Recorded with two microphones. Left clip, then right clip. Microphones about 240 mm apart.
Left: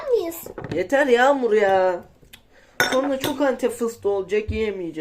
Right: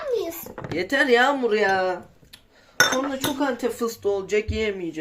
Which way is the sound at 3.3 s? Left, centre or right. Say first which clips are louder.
Left 4 dB; centre.